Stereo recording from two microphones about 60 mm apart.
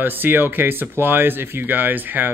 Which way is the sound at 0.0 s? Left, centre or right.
Right.